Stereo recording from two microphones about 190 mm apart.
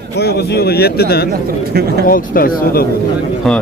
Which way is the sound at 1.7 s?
55° right (ahead or behind).